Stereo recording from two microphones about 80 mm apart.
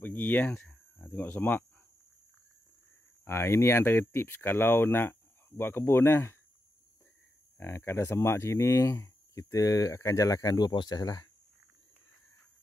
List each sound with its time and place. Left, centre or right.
0.0 s speech: left
3.3 s speech: left
7.5 s speech: left
10.7 s speech: left